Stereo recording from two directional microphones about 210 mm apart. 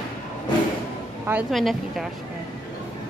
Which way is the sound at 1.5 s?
Centre (ahead or behind).